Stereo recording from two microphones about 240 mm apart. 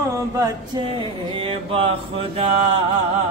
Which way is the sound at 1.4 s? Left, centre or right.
Right.